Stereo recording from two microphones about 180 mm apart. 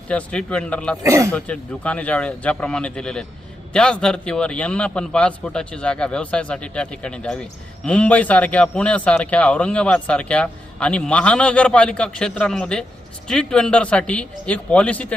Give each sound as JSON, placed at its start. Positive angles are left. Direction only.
{"t": 0.1, "sound": "a man's voice", "side_deg": 5}
{"t": 1.0, "sound": "speech", "side_deg": -15}
{"t": 1.3, "sound": "a man's voice", "side_deg": 5}